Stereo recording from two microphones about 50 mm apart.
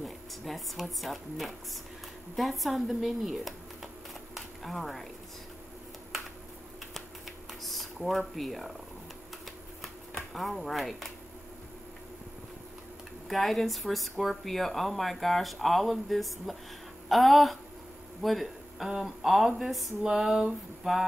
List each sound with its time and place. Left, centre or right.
0.0 s speech: centre
6.9 s typewriter: centre
8.4 s speech: centre
10.3 s speech: centre
13.3 s speech: centre
18.2 s a sound: centre
18.9 s speech: centre
20.0 s a sound: centre